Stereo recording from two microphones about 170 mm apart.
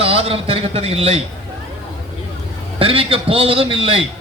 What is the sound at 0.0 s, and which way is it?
A man's voice, 35° right (ahead or behind).